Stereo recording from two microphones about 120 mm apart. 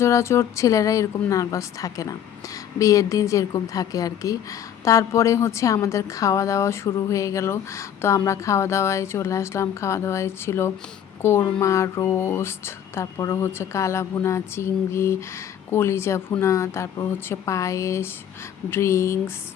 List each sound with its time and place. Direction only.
0.0 s a woman's voice: 25° left (ahead or behind)